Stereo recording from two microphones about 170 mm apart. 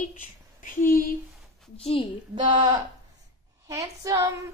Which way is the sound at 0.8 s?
55° left (ahead or behind).